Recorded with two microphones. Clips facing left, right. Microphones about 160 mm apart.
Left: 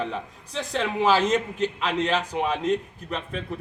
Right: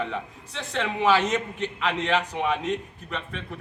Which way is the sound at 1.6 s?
35° left (ahead or behind).